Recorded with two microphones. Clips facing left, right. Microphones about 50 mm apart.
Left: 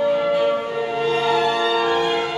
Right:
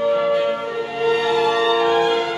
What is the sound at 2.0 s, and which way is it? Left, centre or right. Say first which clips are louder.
Music: right 2 dB; centre.